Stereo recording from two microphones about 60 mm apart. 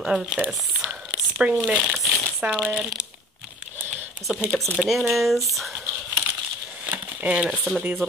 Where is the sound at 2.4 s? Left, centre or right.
Centre.